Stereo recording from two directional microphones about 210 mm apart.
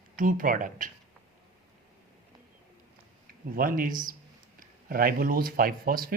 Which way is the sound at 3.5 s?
40° right (ahead or behind).